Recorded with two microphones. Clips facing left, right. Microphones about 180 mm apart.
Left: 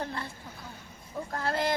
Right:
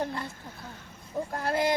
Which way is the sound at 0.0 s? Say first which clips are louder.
Right 3 dB; 15° right (ahead or behind).